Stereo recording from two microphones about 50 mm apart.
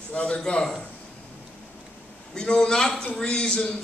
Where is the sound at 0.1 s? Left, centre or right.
Left.